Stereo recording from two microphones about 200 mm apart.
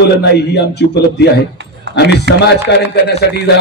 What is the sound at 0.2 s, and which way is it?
A man's voice, 55° left (ahead or behind).